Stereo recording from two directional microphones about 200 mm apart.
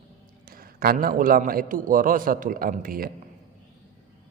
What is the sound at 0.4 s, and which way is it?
A man's voice, 45° right (ahead or behind).